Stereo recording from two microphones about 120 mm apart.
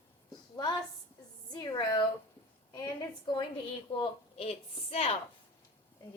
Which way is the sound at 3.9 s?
55° left (ahead or behind).